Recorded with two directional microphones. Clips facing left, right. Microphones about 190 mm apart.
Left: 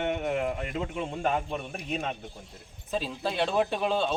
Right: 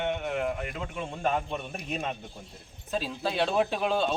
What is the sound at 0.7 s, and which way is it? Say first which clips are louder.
Speech: left 4 dB; 20° left (ahead or behind).